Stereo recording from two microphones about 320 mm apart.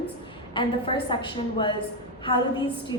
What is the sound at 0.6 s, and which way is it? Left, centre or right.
Speech, centre.